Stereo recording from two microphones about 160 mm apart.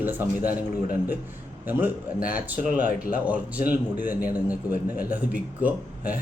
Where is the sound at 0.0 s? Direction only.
10° right (ahead or behind).